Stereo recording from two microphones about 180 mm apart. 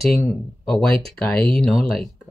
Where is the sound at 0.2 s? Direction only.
Centre (ahead or behind).